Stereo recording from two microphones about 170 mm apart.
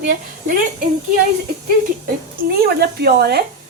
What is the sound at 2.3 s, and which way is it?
A woman's voice, 60° right (ahead or behind).